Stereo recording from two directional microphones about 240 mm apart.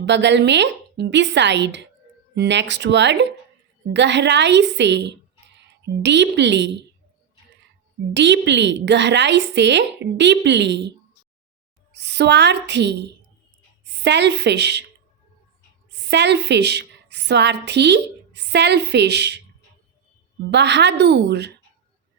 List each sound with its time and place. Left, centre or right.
0.0 s a woman's voice: right
8.1 s a woman's voice: right
15.9 s a woman's voice: right
20.5 s a woman's voice: right